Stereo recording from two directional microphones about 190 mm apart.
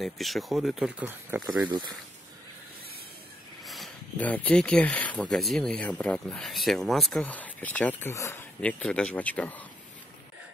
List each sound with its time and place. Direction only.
0.0 s speech: centre (ahead or behind)
1.7 s speech: 20° right (ahead or behind)
3.6 s speech: centre (ahead or behind)